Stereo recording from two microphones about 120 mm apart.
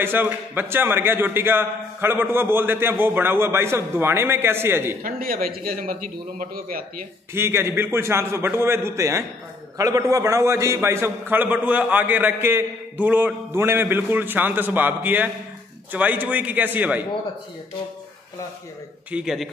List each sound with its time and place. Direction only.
0.0 s a man's voice: 15° right (ahead or behind)
7.3 s a man's voice: 20° right (ahead or behind)
19.0 s a man's voice: 5° right (ahead or behind)